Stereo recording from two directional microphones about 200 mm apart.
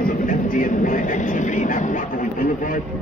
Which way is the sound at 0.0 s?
45° left (ahead or behind).